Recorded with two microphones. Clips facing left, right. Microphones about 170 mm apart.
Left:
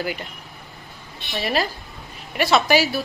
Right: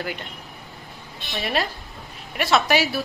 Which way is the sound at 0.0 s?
5° left (ahead or behind).